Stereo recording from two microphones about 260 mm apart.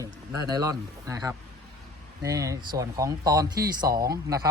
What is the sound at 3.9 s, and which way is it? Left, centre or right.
Speech, centre.